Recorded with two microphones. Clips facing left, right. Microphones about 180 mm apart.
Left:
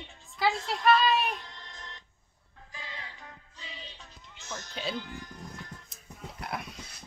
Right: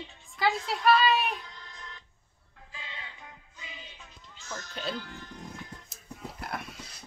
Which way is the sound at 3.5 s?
30° left (ahead or behind).